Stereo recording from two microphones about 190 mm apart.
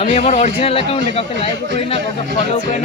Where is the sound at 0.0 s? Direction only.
35° left (ahead or behind).